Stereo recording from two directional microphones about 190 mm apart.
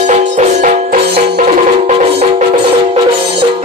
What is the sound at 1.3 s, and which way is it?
Music, 35° right (ahead or behind).